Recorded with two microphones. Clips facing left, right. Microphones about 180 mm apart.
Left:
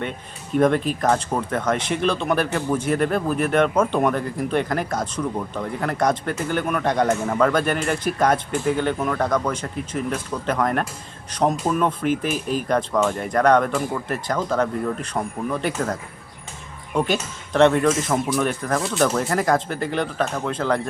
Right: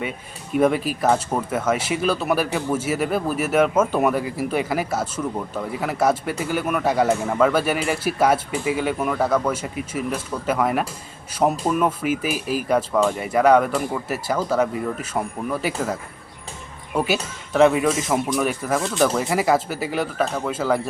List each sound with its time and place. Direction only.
0.5 s speech: 5° right (ahead or behind)